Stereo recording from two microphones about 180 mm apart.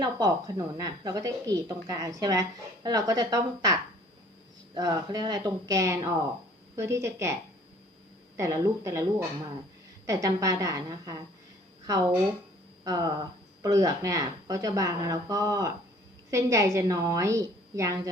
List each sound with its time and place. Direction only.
0.0 s a woman's voice: 20° right (ahead or behind)
8.4 s a woman's voice: 20° right (ahead or behind)
10.1 s a woman's voice: 20° right (ahead or behind)
12.8 s a woman's voice: 20° right (ahead or behind)